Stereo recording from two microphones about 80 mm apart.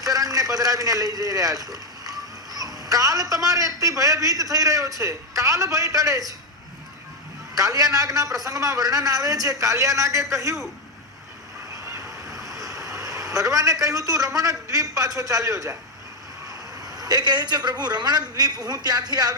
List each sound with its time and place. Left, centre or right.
0.0 s a man's voice: right
7.5 s a man's voice: right
12.3 s vehicle: centre
12.7 s vehicle: right
13.8 s a man's voice: right